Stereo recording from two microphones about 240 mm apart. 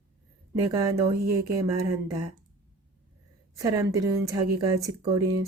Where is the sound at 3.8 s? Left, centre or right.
Centre.